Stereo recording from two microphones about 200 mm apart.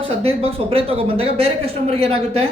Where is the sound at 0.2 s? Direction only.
30° right (ahead or behind).